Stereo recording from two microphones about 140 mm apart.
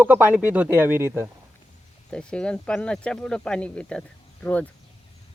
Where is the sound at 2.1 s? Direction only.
5° left (ahead or behind).